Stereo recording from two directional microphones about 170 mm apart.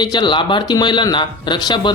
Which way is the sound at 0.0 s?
25° left (ahead or behind).